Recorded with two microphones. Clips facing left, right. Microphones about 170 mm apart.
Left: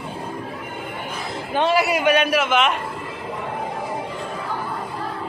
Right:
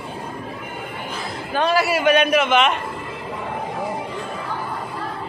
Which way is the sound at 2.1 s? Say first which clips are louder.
Right 2 dB; 5° left (ahead or behind).